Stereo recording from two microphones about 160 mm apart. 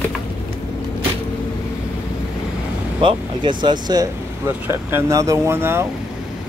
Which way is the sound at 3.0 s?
30° right (ahead or behind).